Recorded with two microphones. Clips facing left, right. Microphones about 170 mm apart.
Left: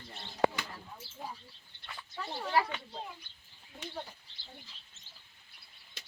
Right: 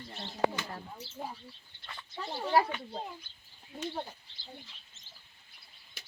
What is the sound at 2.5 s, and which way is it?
Speech, 40° right (ahead or behind).